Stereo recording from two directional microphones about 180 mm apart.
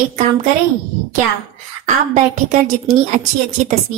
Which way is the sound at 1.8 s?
45° right (ahead or behind).